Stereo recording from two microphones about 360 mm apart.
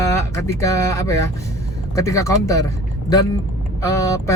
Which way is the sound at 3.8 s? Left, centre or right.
Centre.